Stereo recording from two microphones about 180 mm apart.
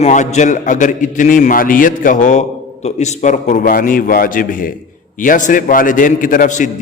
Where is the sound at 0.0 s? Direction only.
40° left (ahead or behind).